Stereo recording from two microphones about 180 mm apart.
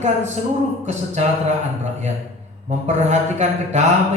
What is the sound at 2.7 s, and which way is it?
A man's voice, 40° right (ahead or behind).